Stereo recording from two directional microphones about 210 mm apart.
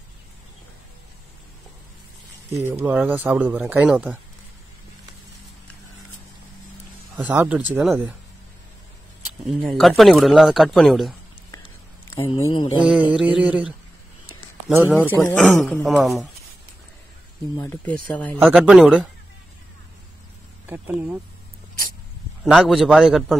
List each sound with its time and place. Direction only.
2.8 s speech: 10° right (ahead or behind)
7.2 s speech: 5° right (ahead or behind)
9.5 s speech: centre (ahead or behind)
11.5 s a sound: 15° left (ahead or behind)
12.4 s mantra: 25° left (ahead or behind)
12.8 s speech: 5° right (ahead or behind)
15.0 s speech: 5° left (ahead or behind)
17.6 s speech: 10° left (ahead or behind)
18.4 s speech: 5° right (ahead or behind)
20.6 s speech: 10° right (ahead or behind)
22.4 s speech: centre (ahead or behind)